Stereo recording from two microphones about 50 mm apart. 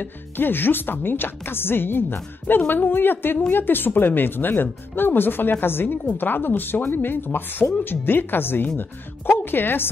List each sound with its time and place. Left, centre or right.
0.0 s speech: left